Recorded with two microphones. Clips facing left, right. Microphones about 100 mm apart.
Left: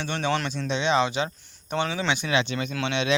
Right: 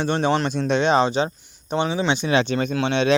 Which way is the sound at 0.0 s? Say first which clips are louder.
Right 6 dB; 40° right (ahead or behind).